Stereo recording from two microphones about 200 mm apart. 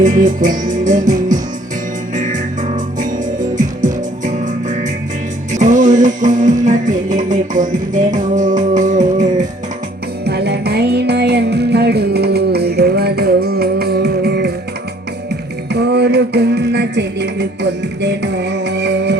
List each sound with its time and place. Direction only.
0.0 s music: 40° right (ahead or behind)
5.5 s music: 40° right (ahead or behind)
10.2 s music: 55° right (ahead or behind)
15.7 s music: 55° right (ahead or behind)